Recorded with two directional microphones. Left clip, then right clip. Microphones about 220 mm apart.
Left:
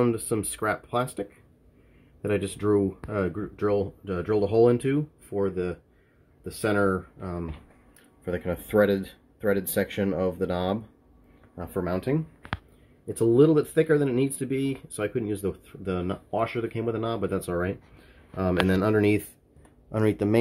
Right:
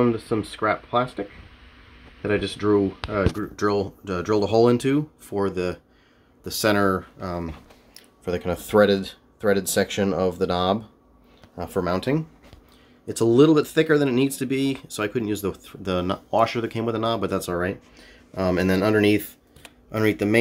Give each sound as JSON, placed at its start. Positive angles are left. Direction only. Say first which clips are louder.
{"t": 0.0, "sound": "speech", "louder": "right 3 dB", "side_deg": 5}
{"t": 2.2, "sound": "speech", "louder": "right 3 dB", "side_deg": 5}